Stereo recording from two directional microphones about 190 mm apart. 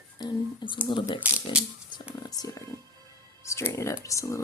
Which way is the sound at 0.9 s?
25° left (ahead or behind).